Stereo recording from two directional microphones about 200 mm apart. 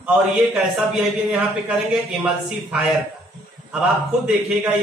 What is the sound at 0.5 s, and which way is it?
A man's voice, 5° right (ahead or behind).